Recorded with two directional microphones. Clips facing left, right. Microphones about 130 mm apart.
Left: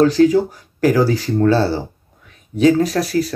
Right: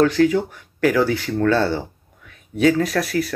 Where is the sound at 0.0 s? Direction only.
30° left (ahead or behind).